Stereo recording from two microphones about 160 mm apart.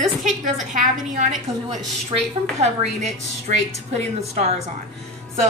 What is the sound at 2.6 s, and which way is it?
A woman's voice, 45° right (ahead or behind).